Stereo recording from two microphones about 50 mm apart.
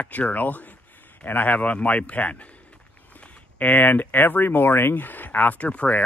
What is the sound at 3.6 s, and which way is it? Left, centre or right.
Speech, left.